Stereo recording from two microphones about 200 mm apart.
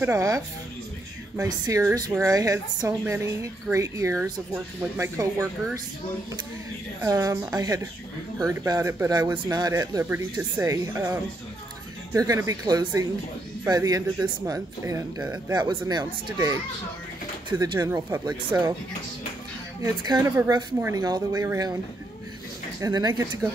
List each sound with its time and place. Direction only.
0.0 s a woman's voice: 15° right (ahead or behind)
7.0 s a woman's voice: 15° right (ahead or behind)
19.8 s speech: 20° right (ahead or behind)
22.8 s speech: 15° right (ahead or behind)